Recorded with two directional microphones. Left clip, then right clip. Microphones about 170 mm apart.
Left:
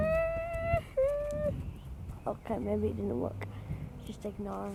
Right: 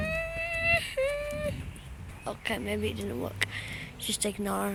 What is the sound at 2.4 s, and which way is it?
Speech, 5° left (ahead or behind).